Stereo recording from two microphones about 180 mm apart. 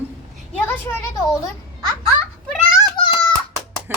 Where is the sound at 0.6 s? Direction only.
10° left (ahead or behind).